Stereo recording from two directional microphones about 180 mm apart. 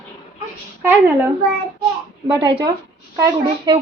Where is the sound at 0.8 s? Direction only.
10° right (ahead or behind).